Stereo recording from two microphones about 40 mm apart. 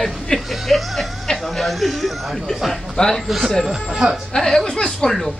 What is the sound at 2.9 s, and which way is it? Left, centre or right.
Speech, centre.